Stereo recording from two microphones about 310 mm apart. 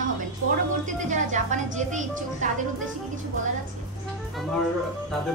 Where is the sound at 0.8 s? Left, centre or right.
Right.